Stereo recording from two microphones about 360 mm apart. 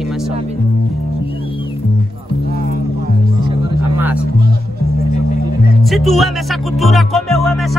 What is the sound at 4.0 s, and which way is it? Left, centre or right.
Speech, centre.